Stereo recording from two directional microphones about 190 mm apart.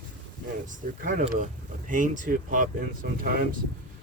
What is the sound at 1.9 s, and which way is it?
Speech, 40° right (ahead or behind).